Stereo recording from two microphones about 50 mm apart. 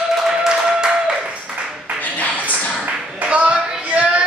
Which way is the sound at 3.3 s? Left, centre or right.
Right.